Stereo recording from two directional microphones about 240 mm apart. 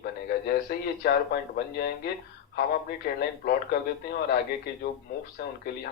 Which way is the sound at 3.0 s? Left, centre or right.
Left.